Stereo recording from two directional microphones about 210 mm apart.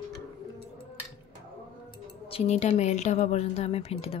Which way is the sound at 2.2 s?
30° left (ahead or behind).